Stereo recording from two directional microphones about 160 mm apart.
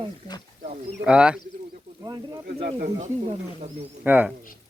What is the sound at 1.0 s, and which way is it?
Speech, 5° right (ahead or behind).